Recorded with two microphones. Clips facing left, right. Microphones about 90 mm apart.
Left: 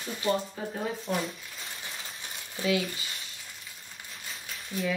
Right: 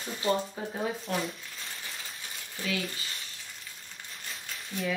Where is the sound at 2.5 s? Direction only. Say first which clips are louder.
Left 6 dB; 20° left (ahead or behind).